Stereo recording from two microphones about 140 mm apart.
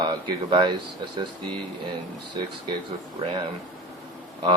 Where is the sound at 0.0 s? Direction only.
35° right (ahead or behind).